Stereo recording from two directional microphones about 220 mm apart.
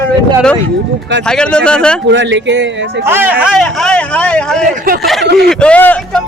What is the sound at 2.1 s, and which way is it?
Speech, 55° right (ahead or behind).